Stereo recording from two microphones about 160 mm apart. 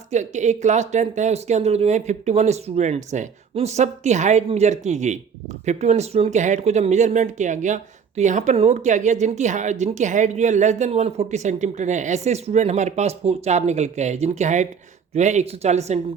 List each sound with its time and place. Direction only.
0.1 s speech: 50° right (ahead or behind)